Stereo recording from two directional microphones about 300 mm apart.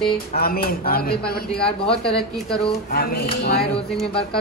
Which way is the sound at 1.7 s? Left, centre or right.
Centre.